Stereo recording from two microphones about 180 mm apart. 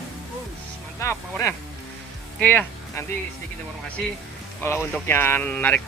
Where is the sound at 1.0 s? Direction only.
15° left (ahead or behind).